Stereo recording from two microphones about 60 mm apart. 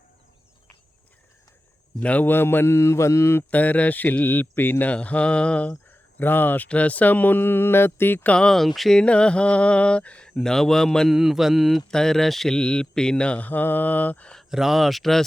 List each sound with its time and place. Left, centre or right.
2.0 s speech: left
2.3 s speech: left
2.7 s mantra: left
3.5 s speech: left
4.9 s speech: centre
5.9 s a sound: left
6.7 s speech: left
8.3 s speech: centre
9.0 s speech: centre
10.3 s speech: centre
11.1 s speech: centre
11.9 s speech: centre
13.5 s speech: left
14.5 s speech: centre